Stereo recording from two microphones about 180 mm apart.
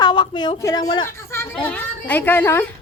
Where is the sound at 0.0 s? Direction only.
25° left (ahead or behind).